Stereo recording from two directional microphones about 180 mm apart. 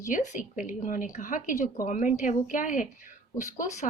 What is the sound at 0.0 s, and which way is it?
A woman's voice, 45° left (ahead or behind).